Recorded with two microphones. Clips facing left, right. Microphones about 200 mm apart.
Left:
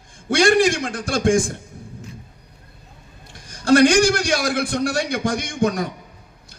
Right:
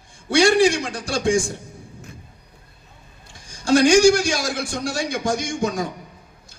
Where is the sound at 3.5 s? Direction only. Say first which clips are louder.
Left 1 dB; 60° left (ahead or behind).